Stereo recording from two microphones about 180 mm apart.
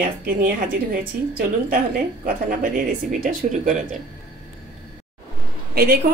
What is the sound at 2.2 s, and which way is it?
Speech, 55° right (ahead or behind).